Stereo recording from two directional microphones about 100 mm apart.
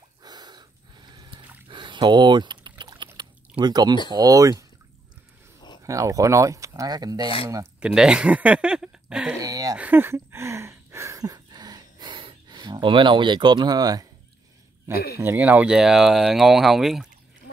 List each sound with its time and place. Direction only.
0.2 s a sound: 45° right (ahead or behind)
1.7 s typing: 50° right (ahead or behind)
2.8 s a sound: 50° right (ahead or behind)
4.1 s speech: 35° right (ahead or behind)
5.9 s speech: 30° right (ahead or behind)
7.8 s speech: 5° right (ahead or behind)
9.4 s speech: 35° right (ahead or behind)
9.8 s a sound: 20° right (ahead or behind); by 14.0 s 40° right (ahead or behind)
14.9 s speech: 25° right (ahead or behind); by 17.1 s centre (ahead or behind)